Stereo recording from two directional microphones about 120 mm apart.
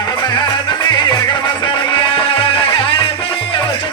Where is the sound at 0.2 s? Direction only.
40° left (ahead or behind).